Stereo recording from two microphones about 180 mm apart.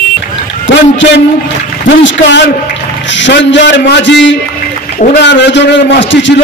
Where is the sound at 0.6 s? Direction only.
85° left.